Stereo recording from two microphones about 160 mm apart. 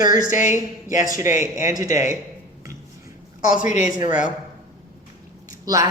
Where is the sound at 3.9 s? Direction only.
25° right (ahead or behind).